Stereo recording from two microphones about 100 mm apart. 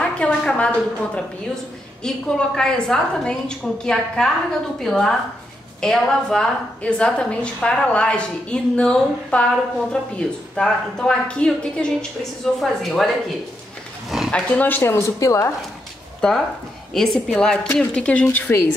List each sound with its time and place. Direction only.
0.0 s a woman's voice: 10° left (ahead or behind)
14.3 s a woman's voice: 15° left (ahead or behind)
14.8 s speech: 25° left (ahead or behind)
16.2 s a woman's voice: 5° left (ahead or behind)